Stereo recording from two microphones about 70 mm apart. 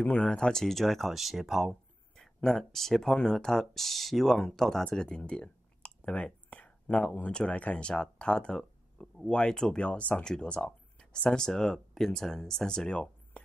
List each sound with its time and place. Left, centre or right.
0.0 s speech: centre
4.9 s a sound: centre
7.3 s speech: centre